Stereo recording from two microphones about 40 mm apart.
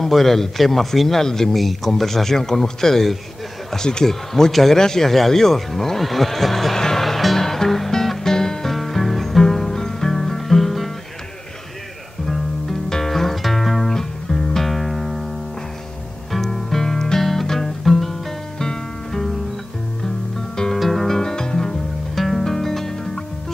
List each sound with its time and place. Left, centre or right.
0.0 s speech: centre
4.7 s neigh: centre
8.7 s music: centre
12.3 s music: centre
16.3 s music: centre
20.5 s music: centre
22.1 s music: centre